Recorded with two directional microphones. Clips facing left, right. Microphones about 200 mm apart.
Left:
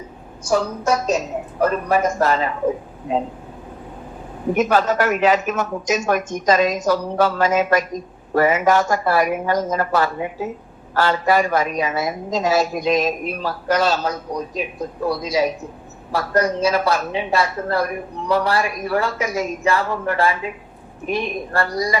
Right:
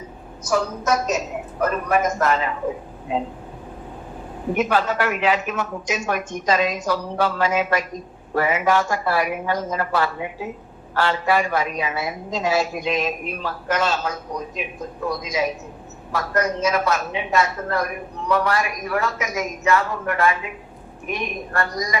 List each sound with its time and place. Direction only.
0.4 s a woman's voice: 30° left (ahead or behind)
4.5 s a woman's voice: 45° left (ahead or behind)